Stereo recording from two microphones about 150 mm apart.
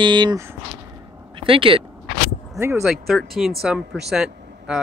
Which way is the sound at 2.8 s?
Centre (ahead or behind).